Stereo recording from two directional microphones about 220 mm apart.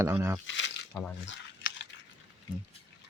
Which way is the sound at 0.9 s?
5° left (ahead or behind).